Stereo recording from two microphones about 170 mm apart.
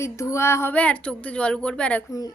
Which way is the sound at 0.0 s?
15° left (ahead or behind).